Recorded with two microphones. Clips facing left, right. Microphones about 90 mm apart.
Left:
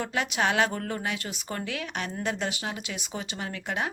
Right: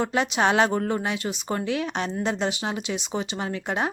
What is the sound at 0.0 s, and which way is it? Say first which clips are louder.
A woman's voice: right 5 dB; 25° right (ahead or behind).